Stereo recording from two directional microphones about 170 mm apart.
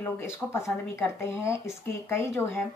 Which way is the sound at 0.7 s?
15° left (ahead or behind).